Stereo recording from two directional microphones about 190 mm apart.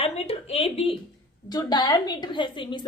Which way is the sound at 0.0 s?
30° left (ahead or behind).